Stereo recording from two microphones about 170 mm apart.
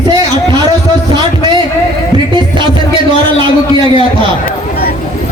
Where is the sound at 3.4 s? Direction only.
30° right (ahead or behind).